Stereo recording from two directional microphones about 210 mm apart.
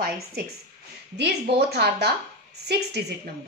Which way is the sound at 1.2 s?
50° right (ahead or behind).